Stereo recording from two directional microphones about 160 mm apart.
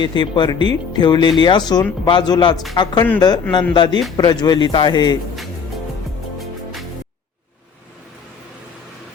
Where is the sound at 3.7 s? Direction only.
30° left (ahead or behind).